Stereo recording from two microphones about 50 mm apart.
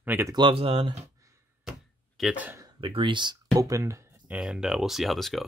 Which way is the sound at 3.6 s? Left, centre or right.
Right.